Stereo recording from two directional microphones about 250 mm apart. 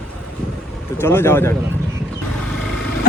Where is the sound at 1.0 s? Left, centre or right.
Centre.